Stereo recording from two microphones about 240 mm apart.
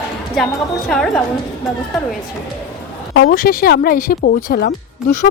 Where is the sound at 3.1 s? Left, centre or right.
Left.